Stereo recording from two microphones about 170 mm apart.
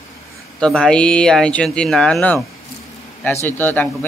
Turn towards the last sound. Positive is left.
turn(degrees=10)  # may be behind; listen again after turning